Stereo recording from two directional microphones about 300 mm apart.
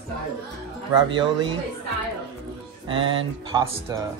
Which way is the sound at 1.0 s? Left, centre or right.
Centre.